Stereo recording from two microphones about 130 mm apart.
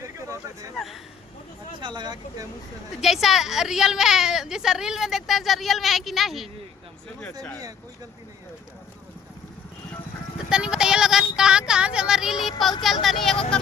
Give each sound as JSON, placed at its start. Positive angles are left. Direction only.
{"t": 1.8, "sound": "speech", "side_deg": -35}
{"t": 3.0, "sound": "a woman's voice", "side_deg": 0}
{"t": 10.5, "sound": "a woman's voice", "side_deg": -5}